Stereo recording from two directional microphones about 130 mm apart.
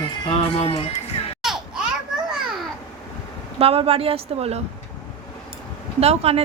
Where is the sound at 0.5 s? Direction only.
50° left (ahead or behind).